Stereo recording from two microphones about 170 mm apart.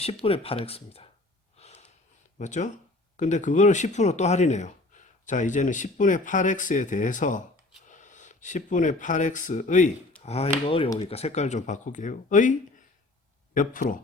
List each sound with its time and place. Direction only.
0.0 s speech: 35° left (ahead or behind)
1.5 s gasp: 40° left (ahead or behind)
2.4 s speech: 45° left (ahead or behind)
10.2 s speech: 35° left (ahead or behind)